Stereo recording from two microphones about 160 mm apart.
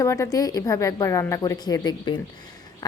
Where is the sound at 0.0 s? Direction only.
20° left (ahead or behind).